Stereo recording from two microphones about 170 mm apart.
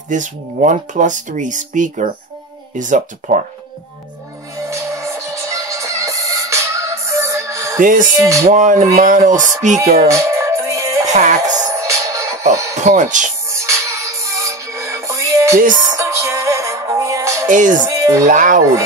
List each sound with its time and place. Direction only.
0.1 s speech: 50° right (ahead or behind)
4.6 s music: 15° right (ahead or behind)
7.8 s speech: 50° right (ahead or behind)
8.2 s music: 20° right (ahead or behind)
8.5 s speech: 45° right (ahead or behind)
10.1 s music: 15° right (ahead or behind)
11.1 s music: 45° right (ahead or behind)
11.6 s music: 20° right (ahead or behind)
12.8 s speech: 45° right (ahead or behind)
13.5 s music: 15° right (ahead or behind)
17.5 s speech: 50° right (ahead or behind)
17.9 s music: 15° right (ahead or behind)
18.2 s speech: 50° right (ahead or behind)